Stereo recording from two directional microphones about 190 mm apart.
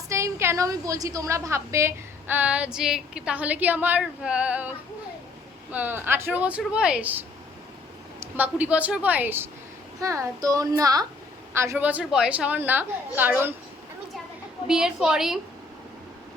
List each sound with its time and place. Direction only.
0.1 s a woman's voice: 15° right (ahead or behind)
5.7 s a woman's voice: 10° right (ahead or behind)
14.7 s a woman's voice: 5° right (ahead or behind)